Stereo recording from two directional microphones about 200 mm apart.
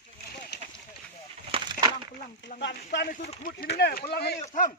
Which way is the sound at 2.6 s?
60° left (ahead or behind).